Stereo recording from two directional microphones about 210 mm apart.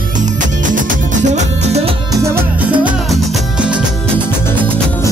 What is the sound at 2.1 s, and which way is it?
Salsa music, 15° right (ahead or behind).